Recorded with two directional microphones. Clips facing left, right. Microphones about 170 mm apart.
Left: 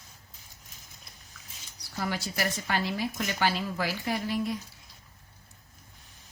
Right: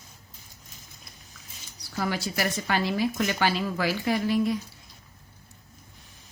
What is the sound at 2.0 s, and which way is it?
A woman's voice, 90° right.